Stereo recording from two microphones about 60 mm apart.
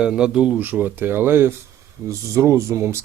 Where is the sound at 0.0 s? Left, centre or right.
Centre.